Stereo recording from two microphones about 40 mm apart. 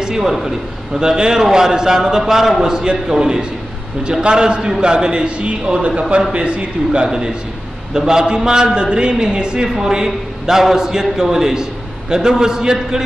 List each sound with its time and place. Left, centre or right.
0.0 s a man's voice: centre
0.9 s a man's voice: centre
7.1 s a man's voice: centre